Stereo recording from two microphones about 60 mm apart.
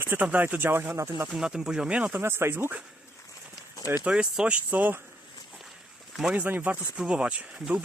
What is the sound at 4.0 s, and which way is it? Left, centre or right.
Speech, centre.